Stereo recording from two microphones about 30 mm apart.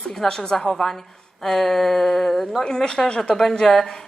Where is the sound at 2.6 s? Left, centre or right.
Left.